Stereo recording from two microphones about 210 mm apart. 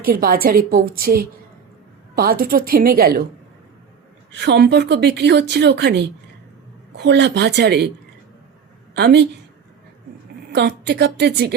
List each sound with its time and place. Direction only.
0.0 s a woman's voice: 45° right (ahead or behind)
4.3 s a woman's voice: 55° right (ahead or behind)
9.0 s a woman's voice: 50° right (ahead or behind)
10.5 s a woman's voice: 55° right (ahead or behind)